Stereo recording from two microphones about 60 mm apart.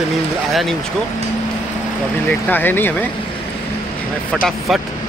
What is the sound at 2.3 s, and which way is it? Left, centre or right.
Speech, left.